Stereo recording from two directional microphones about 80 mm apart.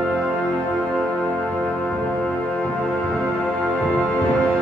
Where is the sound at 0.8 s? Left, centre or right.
Centre.